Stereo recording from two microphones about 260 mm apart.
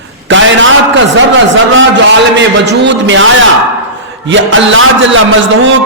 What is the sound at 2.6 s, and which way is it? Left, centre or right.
Speech, right.